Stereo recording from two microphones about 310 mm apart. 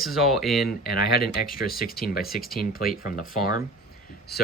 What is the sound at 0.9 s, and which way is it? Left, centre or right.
Speech, left.